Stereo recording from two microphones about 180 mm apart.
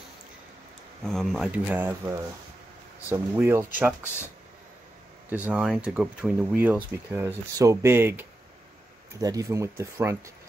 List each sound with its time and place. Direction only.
1.0 s speech: centre (ahead or behind)
5.3 s speech: 10° right (ahead or behind)